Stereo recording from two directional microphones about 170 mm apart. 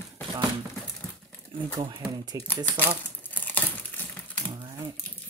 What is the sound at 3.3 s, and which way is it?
Crumpling, 10° left (ahead or behind).